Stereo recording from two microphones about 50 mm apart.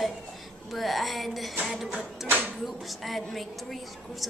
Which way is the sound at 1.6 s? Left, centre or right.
Centre.